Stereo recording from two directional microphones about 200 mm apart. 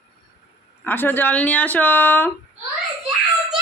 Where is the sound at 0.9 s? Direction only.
10° left (ahead or behind).